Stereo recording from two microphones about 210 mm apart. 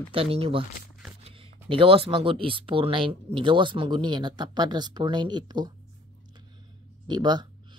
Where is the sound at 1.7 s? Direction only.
25° right (ahead or behind).